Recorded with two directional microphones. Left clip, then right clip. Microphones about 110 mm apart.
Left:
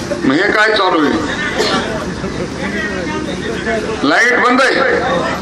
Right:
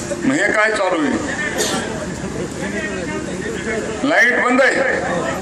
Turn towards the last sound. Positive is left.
turn(degrees=-10)  # may be behind; listen again after turning